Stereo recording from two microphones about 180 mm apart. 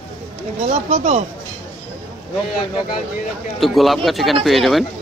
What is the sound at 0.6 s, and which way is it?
Speech, 40° right (ahead or behind).